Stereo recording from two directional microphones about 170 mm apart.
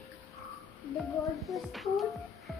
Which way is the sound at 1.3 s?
Centre (ahead or behind).